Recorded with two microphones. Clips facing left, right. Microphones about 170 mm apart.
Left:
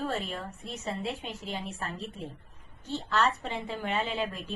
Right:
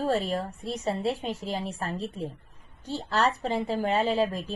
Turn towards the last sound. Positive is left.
turn(degrees=-35)  # may be behind; listen again after turning